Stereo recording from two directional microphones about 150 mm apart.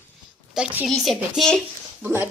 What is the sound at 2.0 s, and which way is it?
Speech, 15° right (ahead or behind).